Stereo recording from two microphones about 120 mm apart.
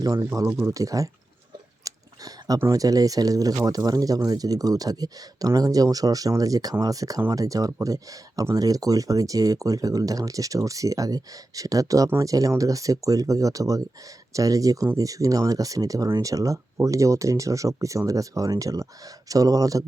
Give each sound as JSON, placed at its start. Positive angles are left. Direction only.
{"t": 0.0, "sound": "speech", "side_deg": -30}
{"t": 1.8, "sound": "a sound", "side_deg": -30}
{"t": 2.6, "sound": "speech", "side_deg": -30}